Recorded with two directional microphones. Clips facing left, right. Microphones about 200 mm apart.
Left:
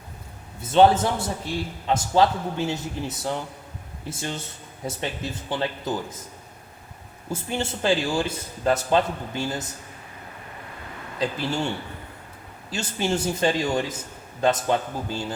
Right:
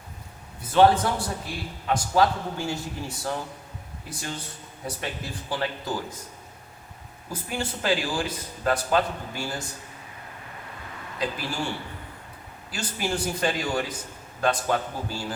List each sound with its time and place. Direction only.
0.7 s a man's voice: 25° left (ahead or behind)
7.3 s a man's voice: 25° left (ahead or behind)
11.2 s a man's voice: 25° left (ahead or behind)
12.7 s a man's voice: 25° left (ahead or behind)